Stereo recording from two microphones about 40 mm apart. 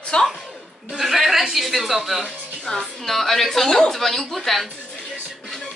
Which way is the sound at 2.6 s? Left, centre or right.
Centre.